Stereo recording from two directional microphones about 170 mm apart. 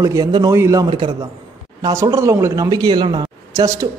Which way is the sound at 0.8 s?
30° right (ahead or behind).